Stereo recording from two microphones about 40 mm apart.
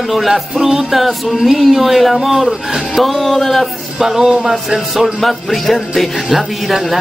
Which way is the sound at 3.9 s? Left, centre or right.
Centre.